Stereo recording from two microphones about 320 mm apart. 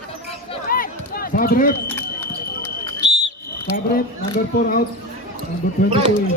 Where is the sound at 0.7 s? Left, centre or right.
Left.